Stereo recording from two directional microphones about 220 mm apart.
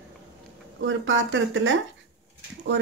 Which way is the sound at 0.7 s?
60° right (ahead or behind).